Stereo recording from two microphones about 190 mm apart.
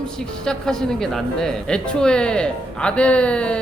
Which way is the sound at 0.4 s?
5° left (ahead or behind).